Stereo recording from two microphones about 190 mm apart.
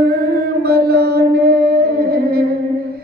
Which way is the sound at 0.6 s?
55° right (ahead or behind).